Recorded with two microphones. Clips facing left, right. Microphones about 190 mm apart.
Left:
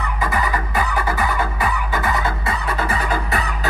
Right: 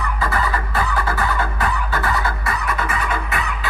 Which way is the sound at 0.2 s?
15° left (ahead or behind).